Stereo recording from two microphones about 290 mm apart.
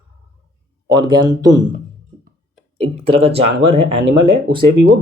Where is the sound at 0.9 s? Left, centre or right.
Centre.